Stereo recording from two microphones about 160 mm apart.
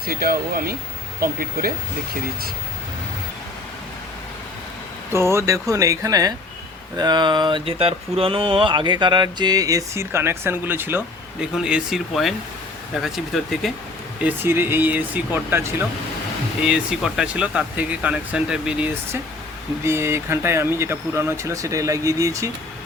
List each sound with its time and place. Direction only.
0.0 s speech: 70° right (ahead or behind)
5.1 s speech: 15° right (ahead or behind)
11.5 s speech: 5° right (ahead or behind)
14.3 s speech: 15° right (ahead or behind)
19.8 s speech: 15° right (ahead or behind)